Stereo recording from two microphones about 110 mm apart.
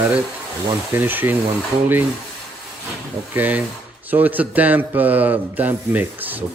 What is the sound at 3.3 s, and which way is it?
A man's voice, 15° right (ahead or behind).